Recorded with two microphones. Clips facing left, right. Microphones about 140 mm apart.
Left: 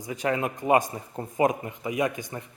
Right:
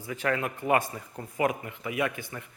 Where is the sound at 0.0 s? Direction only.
20° left (ahead or behind).